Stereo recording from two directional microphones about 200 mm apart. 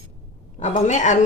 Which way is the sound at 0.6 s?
35° left (ahead or behind).